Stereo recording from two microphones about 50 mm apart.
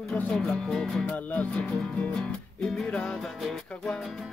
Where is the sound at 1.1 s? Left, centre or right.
Left.